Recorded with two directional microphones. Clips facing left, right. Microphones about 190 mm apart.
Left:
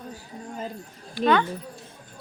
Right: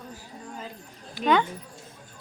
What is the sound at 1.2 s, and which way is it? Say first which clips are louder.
Speech: left 3 dB; 15° right (ahead or behind).